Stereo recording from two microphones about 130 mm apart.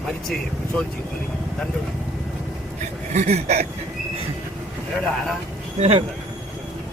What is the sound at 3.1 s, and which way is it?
Speech, 60° right (ahead or behind).